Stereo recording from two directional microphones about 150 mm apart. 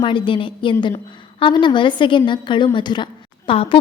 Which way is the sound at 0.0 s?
35° left (ahead or behind).